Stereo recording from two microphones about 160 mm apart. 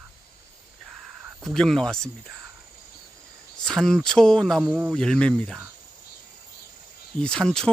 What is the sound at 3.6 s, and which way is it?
Speech, centre (ahead or behind).